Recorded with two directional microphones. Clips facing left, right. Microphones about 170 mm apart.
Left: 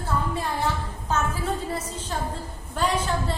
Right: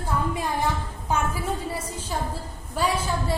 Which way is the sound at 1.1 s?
10° right (ahead or behind).